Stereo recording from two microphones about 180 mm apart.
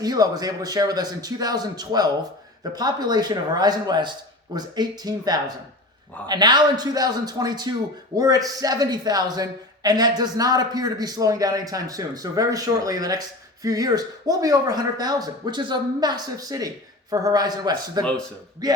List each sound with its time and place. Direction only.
0.0 s speech: 20° right (ahead or behind)